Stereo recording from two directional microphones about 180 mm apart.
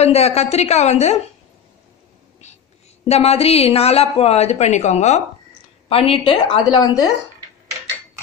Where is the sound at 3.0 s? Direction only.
35° left (ahead or behind).